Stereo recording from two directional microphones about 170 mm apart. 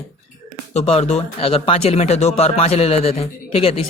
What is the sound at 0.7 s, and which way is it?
Speech, 35° left (ahead or behind).